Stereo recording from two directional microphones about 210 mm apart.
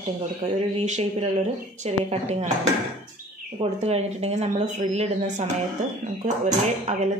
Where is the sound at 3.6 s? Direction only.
30° right (ahead or behind).